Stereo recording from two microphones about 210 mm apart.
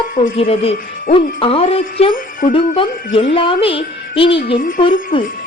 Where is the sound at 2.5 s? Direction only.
25° left (ahead or behind).